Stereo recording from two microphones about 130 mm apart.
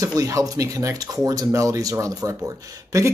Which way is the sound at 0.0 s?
25° right (ahead or behind).